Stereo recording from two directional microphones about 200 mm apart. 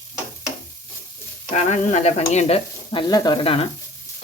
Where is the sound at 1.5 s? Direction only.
35° left (ahead or behind).